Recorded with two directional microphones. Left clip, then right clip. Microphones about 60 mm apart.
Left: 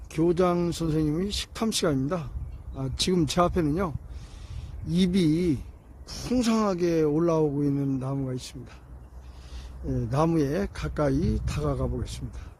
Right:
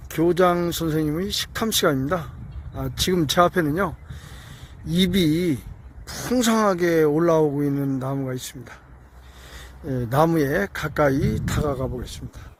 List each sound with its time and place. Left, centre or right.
0.1 s speech: centre
3.2 s a man's voice: right
6.1 s speech: right
10.2 s speech: right